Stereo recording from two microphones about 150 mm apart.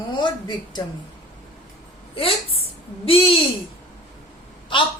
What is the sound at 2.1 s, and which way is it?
Speech, 40° left (ahead or behind).